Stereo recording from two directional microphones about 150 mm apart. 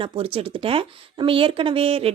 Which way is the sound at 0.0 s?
35° right (ahead or behind).